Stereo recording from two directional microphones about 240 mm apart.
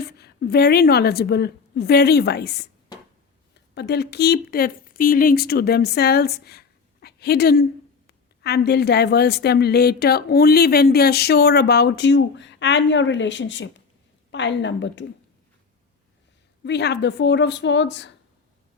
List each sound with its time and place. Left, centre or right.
0.2 s a woman's voice: left
16.6 s a woman's voice: left